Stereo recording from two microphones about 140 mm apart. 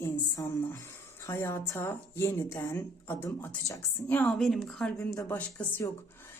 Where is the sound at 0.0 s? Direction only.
20° left (ahead or behind).